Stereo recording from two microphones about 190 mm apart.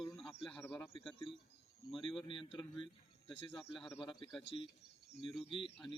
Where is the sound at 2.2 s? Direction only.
25° left (ahead or behind).